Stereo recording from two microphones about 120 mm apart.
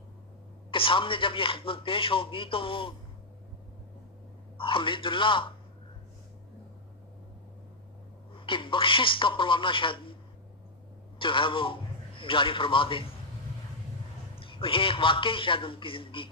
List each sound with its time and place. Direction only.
0.7 s speech: 45° left (ahead or behind)
4.5 s speech: 45° left (ahead or behind)
8.3 s speech: 45° left (ahead or behind)
11.2 s a man's voice: 45° left (ahead or behind)
14.3 s speech: 45° left (ahead or behind)